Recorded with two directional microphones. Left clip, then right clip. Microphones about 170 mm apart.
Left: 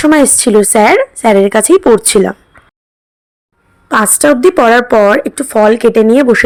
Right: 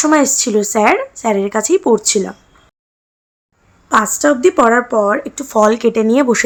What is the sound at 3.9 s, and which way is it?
A woman's voice, 40° left (ahead or behind).